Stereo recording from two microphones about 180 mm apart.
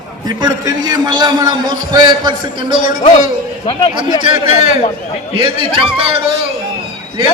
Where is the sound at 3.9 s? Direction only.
30° right (ahead or behind).